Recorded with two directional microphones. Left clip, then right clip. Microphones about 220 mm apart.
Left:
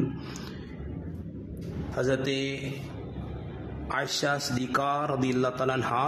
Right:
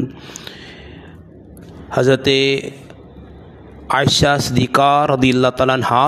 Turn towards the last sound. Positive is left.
turn(degrees=-40)  # may be behind; listen again after turning